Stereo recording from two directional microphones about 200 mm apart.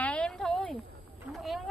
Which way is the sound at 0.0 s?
5° left (ahead or behind).